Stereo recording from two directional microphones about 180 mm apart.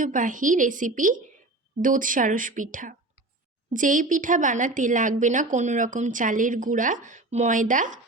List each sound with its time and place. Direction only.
0.0 s a woman's voice: 45° right (ahead or behind)